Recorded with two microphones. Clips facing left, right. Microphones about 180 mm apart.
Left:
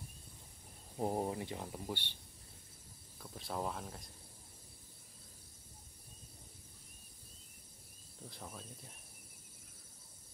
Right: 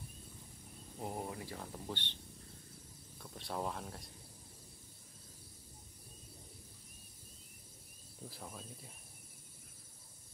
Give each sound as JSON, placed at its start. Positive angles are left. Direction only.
{"t": 0.9, "sound": "speech", "side_deg": 35}
{"t": 3.2, "sound": "speech", "side_deg": 0}
{"t": 8.3, "sound": "speech", "side_deg": 0}